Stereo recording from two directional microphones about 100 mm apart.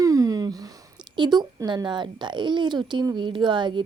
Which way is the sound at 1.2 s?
45° right (ahead or behind).